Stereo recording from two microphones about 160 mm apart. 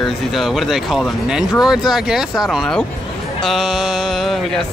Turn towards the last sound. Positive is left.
turn(degrees=0)  # may be behind; listen again after turning